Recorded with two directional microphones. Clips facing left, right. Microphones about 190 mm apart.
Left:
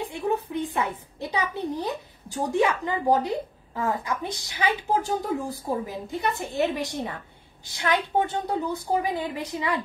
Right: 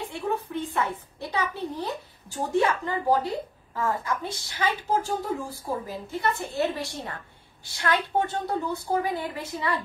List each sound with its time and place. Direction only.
0.0 s a child's voice: 15° left (ahead or behind)